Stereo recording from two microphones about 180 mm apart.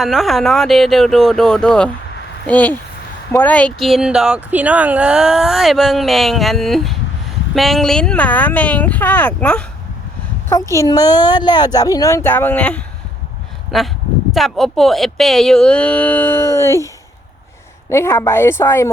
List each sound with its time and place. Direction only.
0.0 s speech: centre (ahead or behind)
10.5 s speech: 20° left (ahead or behind)